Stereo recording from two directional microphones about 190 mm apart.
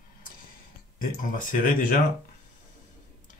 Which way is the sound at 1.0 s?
45° left (ahead or behind).